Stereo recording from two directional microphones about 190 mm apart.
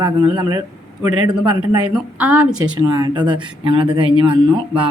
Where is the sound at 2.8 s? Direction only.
20° right (ahead or behind).